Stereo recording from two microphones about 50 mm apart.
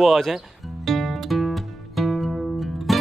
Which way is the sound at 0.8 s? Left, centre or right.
Centre.